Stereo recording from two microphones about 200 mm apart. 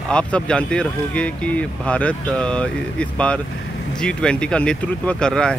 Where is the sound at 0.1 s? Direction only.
5° left (ahead or behind).